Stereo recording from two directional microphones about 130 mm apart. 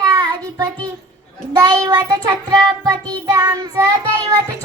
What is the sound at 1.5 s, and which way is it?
Child singing, 30° right (ahead or behind).